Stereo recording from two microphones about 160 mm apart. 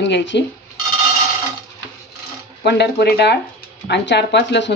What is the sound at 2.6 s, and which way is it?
Speech, 90° left.